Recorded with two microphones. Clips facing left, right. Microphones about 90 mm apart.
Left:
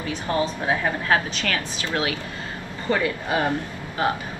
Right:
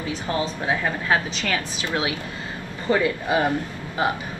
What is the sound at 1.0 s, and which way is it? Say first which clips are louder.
A man's voice: left 1 dB; 20° right (ahead or behind).